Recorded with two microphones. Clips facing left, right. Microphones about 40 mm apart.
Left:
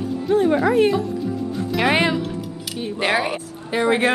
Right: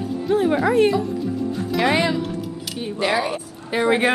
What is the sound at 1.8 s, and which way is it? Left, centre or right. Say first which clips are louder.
Speech: even; left.